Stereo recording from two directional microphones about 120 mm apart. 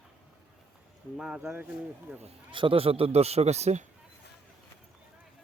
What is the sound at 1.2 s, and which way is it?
Speech, 5° right (ahead or behind).